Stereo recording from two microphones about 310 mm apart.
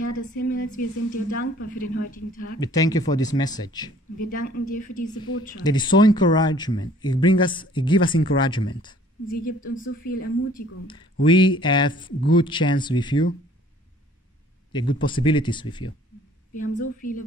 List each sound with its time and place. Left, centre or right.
0.0 s speech: left
2.6 s speech: centre
4.2 s speech: left
5.6 s speech: centre
9.3 s speech: left
11.2 s speech: centre
14.7 s speech: centre
16.7 s speech: left